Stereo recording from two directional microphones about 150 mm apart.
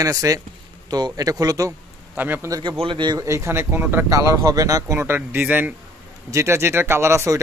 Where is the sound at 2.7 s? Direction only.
35° right (ahead or behind).